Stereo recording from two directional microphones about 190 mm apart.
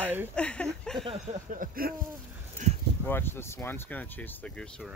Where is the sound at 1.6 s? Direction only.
50° right (ahead or behind).